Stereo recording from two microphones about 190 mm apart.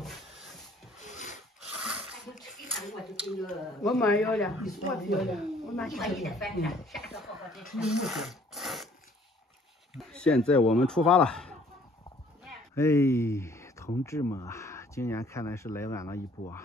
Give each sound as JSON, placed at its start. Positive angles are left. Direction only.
{"t": 1.0, "sound": "filing", "side_deg": 40}
{"t": 1.6, "sound": "a sound", "side_deg": -5}
{"t": 3.8, "sound": "a woman's voice", "side_deg": 0}
{"t": 9.9, "sound": "a woman's voice", "side_deg": 5}
{"t": 12.7, "sound": "speech", "side_deg": 15}